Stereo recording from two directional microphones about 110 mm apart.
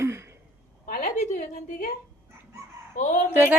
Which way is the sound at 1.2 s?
90° left.